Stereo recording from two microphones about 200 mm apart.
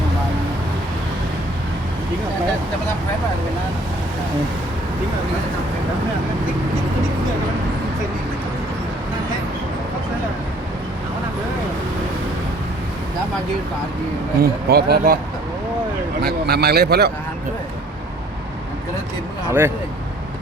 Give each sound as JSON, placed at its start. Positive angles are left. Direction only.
{"t": 14.3, "sound": "a man's voice", "side_deg": -50}
{"t": 16.2, "sound": "a man's voice", "side_deg": -50}
{"t": 19.5, "sound": "speech", "side_deg": -10}